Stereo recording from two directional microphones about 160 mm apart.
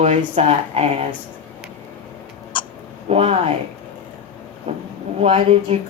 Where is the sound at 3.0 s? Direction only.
40° right (ahead or behind).